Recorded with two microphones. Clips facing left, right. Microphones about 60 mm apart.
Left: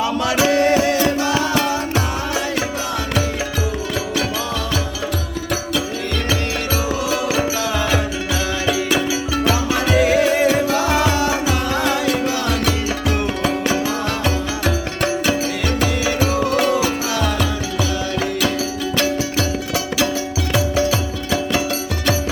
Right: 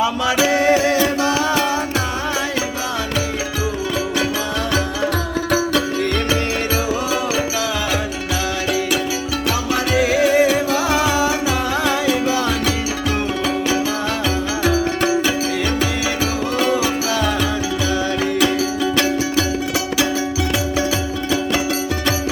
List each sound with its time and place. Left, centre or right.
0.4 s music: centre
9.9 s music: centre
14.6 s music: centre